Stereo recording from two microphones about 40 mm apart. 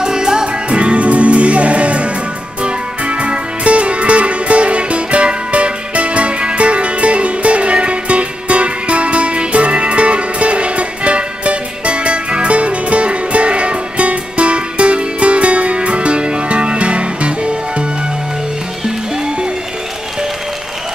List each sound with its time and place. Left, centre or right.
0.0 s music: centre
0.5 s music: right
19.1 s music: right